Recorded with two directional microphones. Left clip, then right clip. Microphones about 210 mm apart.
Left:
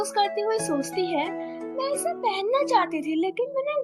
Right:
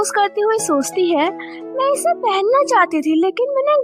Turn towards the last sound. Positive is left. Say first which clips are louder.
# right 11 dB
turn(degrees=-40)  # may be behind; listen again after turning